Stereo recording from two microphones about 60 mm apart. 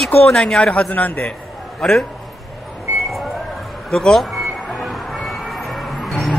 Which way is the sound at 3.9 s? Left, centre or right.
Centre.